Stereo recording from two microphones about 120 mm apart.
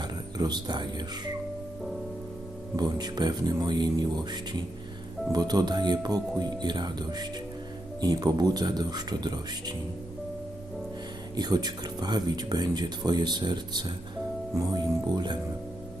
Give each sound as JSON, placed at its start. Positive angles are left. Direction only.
{"t": 0.0, "sound": "speech", "side_deg": -35}
{"t": 2.7, "sound": "speech", "side_deg": -35}
{"t": 11.3, "sound": "speech", "side_deg": -35}